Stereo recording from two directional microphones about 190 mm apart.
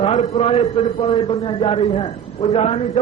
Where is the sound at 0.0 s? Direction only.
35° left (ahead or behind).